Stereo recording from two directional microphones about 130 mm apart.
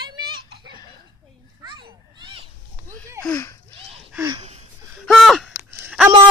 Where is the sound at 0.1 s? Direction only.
30° right (ahead or behind).